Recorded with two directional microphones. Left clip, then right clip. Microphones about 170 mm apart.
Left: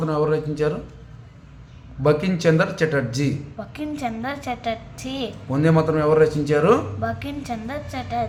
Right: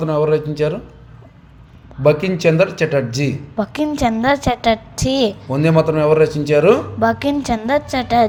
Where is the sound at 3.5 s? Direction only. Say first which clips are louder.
Right 11 dB; 55° right (ahead or behind).